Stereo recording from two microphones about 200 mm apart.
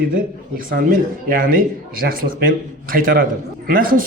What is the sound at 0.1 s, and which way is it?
A man's voice, 45° right (ahead or behind).